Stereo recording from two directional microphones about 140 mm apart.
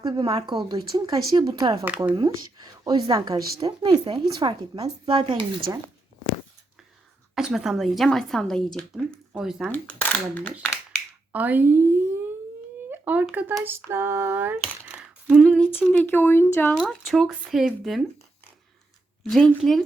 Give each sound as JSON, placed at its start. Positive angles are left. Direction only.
{"t": 0.0, "sound": "speech", "side_deg": -35}
{"t": 2.8, "sound": "speech", "side_deg": -30}
{"t": 7.3, "sound": "a woman's voice", "side_deg": -5}
{"t": 9.0, "sound": "a sound", "side_deg": -5}
{"t": 9.7, "sound": "speech", "side_deg": 10}
{"t": 11.3, "sound": "a sound", "side_deg": -10}
{"t": 13.2, "sound": "a woman's voice", "side_deg": 0}
{"t": 13.7, "sound": "a sound", "side_deg": -15}
{"t": 15.9, "sound": "speech", "side_deg": 10}
{"t": 16.7, "sound": "a woman's voice", "side_deg": 0}
{"t": 19.2, "sound": "a woman's voice", "side_deg": 0}